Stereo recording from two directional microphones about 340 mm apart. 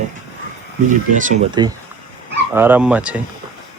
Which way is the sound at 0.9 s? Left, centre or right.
Right.